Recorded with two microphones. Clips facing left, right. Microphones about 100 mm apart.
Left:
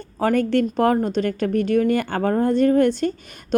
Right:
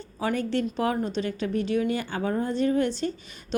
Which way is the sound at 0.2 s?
55° left (ahead or behind).